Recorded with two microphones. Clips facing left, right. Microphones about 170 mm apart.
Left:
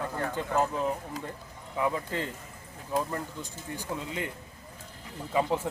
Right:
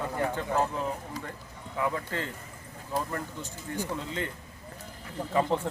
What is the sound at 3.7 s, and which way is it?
Speech, 15° left (ahead or behind).